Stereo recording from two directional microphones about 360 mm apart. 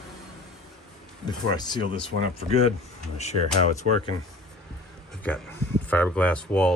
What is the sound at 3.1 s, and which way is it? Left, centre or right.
Speech, centre.